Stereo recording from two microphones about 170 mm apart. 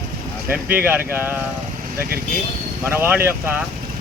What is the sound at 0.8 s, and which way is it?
Speech, 10° right (ahead or behind).